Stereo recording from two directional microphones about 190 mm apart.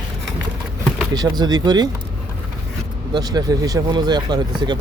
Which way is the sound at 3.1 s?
20° right (ahead or behind).